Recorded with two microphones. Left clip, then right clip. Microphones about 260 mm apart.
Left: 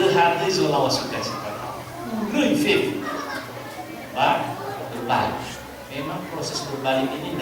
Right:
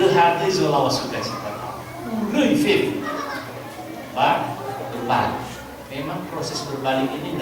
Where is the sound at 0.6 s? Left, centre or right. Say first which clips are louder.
Right 2 dB; right.